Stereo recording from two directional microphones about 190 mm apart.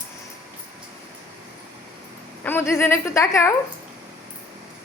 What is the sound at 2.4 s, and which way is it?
A woman's voice, 10° left (ahead or behind).